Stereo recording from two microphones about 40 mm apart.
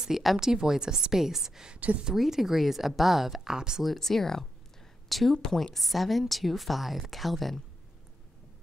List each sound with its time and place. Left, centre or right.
0.1 s a woman's voice: centre
1.8 s speech: right
2.1 s a woman's voice: centre
3.5 s a woman's voice: centre
3.8 s a woman's voice: centre
5.4 s a woman's voice: centre